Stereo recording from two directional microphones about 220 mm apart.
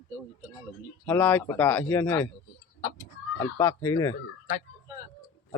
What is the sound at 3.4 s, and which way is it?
Speech, 10° left (ahead or behind).